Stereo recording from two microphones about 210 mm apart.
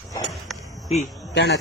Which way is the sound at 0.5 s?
Centre (ahead or behind).